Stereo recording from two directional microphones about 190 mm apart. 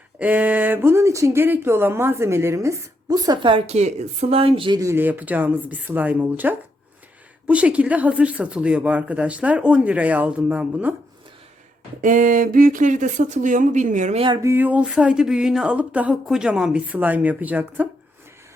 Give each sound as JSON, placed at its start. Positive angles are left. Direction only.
{"t": 0.2, "sound": "speech", "side_deg": -10}
{"t": 12.0, "sound": "speech", "side_deg": -45}
{"t": 14.3, "sound": "speech", "side_deg": -15}